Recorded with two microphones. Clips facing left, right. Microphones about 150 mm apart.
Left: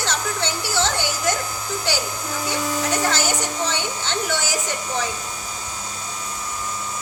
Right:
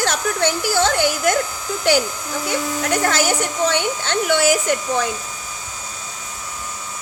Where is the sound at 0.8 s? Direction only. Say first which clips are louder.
Right 4 dB; 55° right (ahead or behind).